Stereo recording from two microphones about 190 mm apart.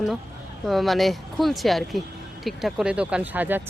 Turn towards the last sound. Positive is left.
turn(degrees=-10)  # may be behind; listen again after turning